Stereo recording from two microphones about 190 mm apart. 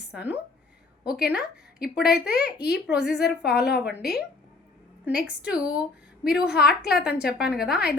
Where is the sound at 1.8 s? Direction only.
55° left (ahead or behind).